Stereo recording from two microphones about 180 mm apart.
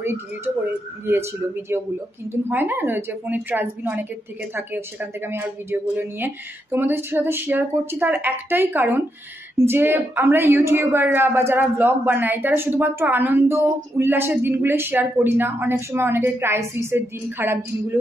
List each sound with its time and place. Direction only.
1.7 s a woman's voice: 10° right (ahead or behind)